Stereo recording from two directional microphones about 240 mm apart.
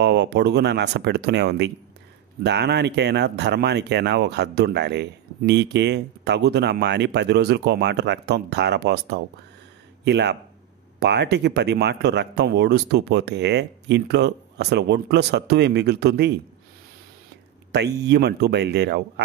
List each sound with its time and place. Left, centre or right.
0.0 s speech: right
18.0 s speech: right